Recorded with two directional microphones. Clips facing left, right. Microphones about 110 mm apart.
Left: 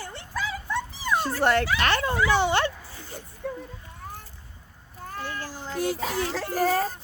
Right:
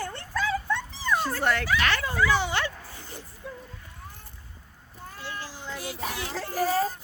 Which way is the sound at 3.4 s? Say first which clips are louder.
Left 8 dB; 60° left (ahead or behind).